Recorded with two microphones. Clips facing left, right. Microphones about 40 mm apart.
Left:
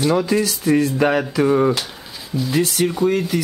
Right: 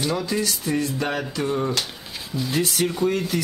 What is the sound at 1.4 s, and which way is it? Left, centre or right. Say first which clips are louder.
Speech: left 9 dB; left.